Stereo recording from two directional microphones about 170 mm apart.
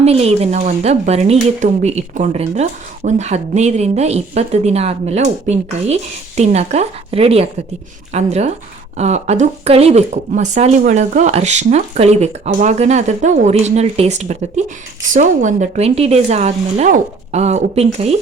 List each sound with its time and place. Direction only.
0.0 s speech: 35° right (ahead or behind)